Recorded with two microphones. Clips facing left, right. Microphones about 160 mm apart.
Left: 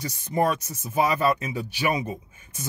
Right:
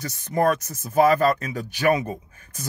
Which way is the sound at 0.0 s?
15° left (ahead or behind).